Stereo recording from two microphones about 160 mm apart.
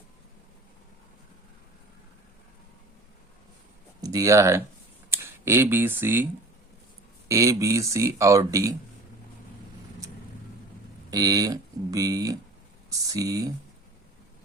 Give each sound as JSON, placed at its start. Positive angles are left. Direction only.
{"t": 4.0, "sound": "speech", "side_deg": -20}
{"t": 7.3, "sound": "speech", "side_deg": -20}
{"t": 11.1, "sound": "speech", "side_deg": -25}